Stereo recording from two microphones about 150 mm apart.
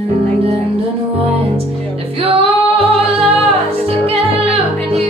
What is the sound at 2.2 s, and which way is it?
Music, 40° right (ahead or behind).